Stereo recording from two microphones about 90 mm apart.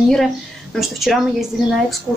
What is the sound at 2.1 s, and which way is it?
Speech, 15° right (ahead or behind).